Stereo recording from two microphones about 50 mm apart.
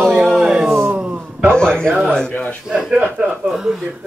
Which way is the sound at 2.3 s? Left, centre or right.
Left.